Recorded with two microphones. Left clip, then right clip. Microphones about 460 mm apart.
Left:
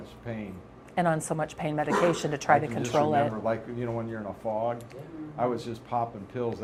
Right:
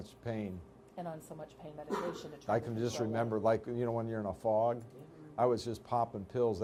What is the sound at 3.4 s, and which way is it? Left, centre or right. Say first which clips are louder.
Speech: left 1 dB; right.